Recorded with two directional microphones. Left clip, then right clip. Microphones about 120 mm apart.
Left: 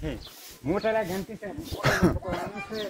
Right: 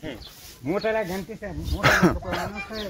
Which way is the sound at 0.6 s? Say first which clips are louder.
Right 1 dB; 90° right.